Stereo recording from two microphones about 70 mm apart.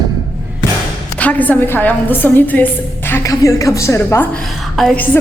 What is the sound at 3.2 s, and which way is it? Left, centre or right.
A woman's voice, left.